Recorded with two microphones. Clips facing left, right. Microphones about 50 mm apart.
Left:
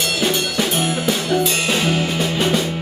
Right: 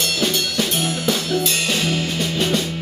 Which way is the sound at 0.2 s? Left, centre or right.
Centre.